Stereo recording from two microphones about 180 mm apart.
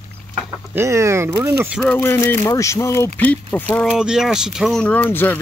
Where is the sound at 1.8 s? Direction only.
10° left (ahead or behind).